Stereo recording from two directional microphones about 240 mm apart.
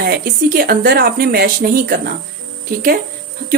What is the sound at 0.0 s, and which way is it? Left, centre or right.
Speech, right.